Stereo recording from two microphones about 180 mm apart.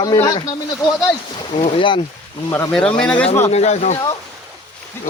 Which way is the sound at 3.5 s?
40° left (ahead or behind).